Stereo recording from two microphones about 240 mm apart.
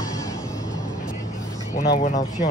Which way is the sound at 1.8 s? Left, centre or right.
Left.